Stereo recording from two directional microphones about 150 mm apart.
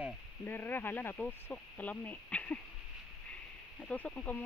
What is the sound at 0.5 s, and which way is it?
Speech, 15° left (ahead or behind).